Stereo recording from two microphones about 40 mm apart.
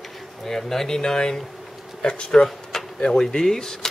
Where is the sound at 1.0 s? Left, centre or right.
Centre.